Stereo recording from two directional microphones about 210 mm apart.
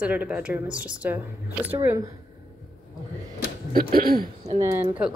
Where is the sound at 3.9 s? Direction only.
45° right (ahead or behind).